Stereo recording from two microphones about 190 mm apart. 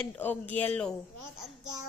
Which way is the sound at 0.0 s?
10° left (ahead or behind).